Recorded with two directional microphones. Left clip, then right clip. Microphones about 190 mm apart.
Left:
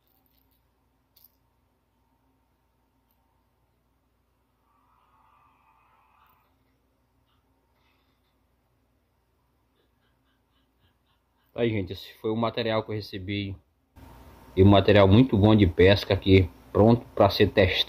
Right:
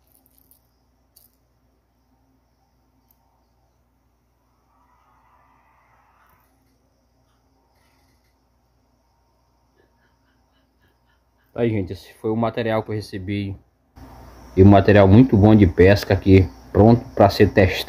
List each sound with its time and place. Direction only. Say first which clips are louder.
11.5 s speech: right 5 dB; centre (ahead or behind)